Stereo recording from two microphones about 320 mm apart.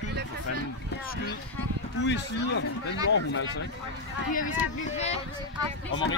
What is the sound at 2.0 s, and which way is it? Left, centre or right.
Speech, left.